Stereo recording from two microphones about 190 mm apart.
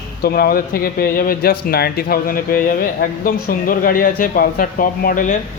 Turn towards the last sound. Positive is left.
turn(degrees=45)  # may be behind; listen again after turning